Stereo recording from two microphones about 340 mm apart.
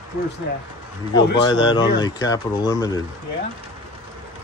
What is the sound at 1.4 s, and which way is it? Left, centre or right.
Speech, centre.